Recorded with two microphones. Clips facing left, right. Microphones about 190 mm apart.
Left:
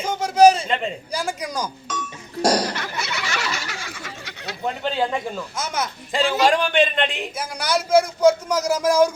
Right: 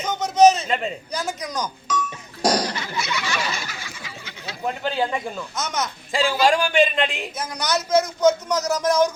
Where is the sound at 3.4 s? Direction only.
75° left (ahead or behind).